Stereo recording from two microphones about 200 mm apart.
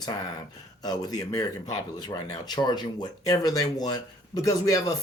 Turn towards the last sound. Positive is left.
turn(degrees=15)  # may be behind; listen again after turning